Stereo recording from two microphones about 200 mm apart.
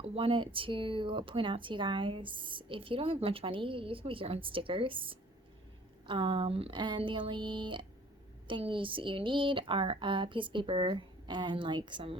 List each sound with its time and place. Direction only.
0.0 s speech: 30° right (ahead or behind)